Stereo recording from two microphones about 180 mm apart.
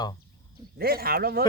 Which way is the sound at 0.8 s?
55° right (ahead or behind).